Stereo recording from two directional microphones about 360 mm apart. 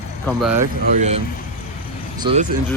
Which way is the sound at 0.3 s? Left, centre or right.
Centre.